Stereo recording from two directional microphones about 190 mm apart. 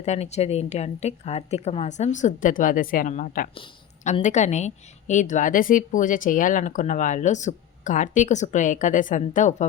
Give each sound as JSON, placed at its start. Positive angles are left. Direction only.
{"t": 0.0, "sound": "a woman's voice", "side_deg": 35}
{"t": 3.5, "sound": "a woman's voice", "side_deg": 30}